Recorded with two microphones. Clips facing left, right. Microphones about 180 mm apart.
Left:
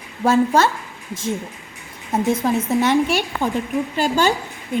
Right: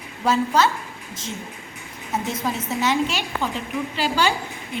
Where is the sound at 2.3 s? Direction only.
55° left (ahead or behind).